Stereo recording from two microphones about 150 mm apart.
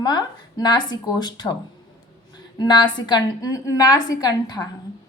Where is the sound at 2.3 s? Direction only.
30° left (ahead or behind).